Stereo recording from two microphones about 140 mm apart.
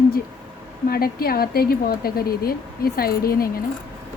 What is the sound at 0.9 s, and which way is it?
A woman's voice, 90° left.